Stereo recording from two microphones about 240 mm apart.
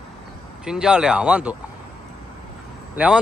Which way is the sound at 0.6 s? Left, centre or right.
Centre.